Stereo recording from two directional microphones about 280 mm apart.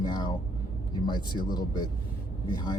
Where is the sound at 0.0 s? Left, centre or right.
Centre.